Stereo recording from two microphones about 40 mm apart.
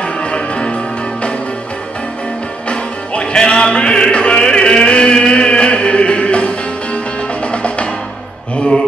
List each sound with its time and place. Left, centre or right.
0.2 s music: left
2.7 s music: left